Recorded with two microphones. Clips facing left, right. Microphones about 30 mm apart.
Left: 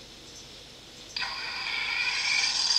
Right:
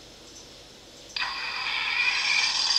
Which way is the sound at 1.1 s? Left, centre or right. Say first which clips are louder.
Right 3 dB; centre.